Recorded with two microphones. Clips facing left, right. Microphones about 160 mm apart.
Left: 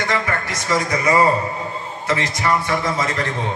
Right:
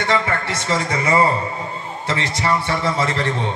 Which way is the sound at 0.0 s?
30° right (ahead or behind).